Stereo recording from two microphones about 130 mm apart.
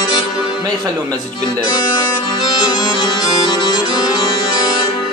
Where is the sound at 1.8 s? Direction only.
35° left (ahead or behind).